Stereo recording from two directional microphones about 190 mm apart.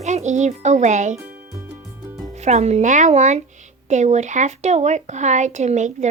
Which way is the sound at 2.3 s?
35° right (ahead or behind).